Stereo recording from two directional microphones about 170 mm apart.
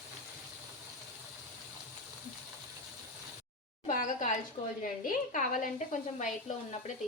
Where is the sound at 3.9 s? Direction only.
45° left (ahead or behind).